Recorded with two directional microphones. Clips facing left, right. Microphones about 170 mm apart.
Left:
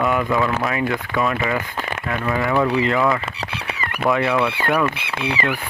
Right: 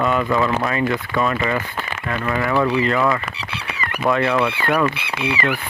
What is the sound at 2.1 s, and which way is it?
Speech, 15° left (ahead or behind).